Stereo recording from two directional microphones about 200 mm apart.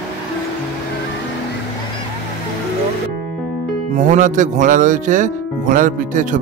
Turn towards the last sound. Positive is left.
turn(degrees=-40)  # may be behind; listen again after turning